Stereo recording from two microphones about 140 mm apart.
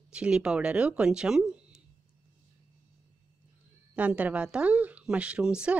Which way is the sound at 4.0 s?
10° right (ahead or behind).